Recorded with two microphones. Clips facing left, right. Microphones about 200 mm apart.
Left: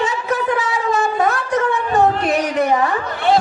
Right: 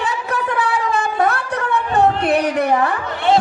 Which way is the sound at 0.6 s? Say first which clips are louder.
Left 1 dB; 60° right (ahead or behind).